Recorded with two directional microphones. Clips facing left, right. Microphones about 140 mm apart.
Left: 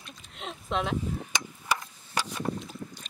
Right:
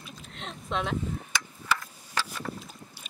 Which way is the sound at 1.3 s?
15° left (ahead or behind).